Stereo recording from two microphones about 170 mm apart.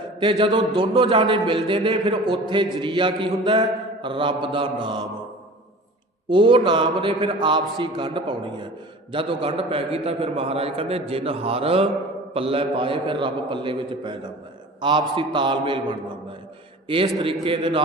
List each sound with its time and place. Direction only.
0.2 s a man's voice: 30° right (ahead or behind)
6.2 s a man's voice: 30° right (ahead or behind)
17.4 s a man's voice: 30° right (ahead or behind)